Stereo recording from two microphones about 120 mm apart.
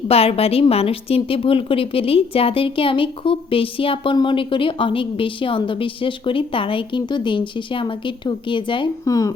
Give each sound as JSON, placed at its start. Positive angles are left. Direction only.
{"t": 0.1, "sound": "a woman's voice", "side_deg": 55}
{"t": 9.0, "sound": "speech", "side_deg": 30}